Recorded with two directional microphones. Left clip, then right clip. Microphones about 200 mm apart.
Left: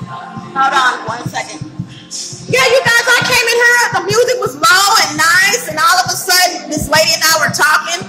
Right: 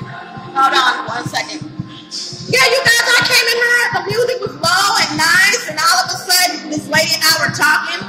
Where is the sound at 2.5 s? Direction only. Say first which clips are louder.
Left 2 dB; 5° left (ahead or behind).